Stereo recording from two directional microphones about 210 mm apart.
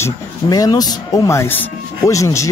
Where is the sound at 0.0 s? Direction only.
20° left (ahead or behind).